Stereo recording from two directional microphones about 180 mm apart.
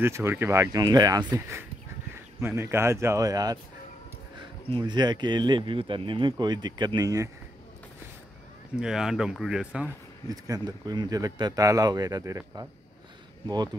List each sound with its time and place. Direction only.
0.0 s speech: 15° right (ahead or behind)
4.6 s speech: 25° right (ahead or behind)
8.7 s speech: 5° right (ahead or behind)
10.2 s speech: 20° right (ahead or behind)